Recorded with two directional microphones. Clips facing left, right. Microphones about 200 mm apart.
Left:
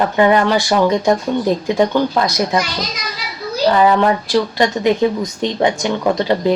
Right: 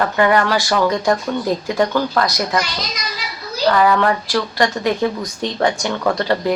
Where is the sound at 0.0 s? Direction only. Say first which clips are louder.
Left 3 dB; 20° left (ahead or behind).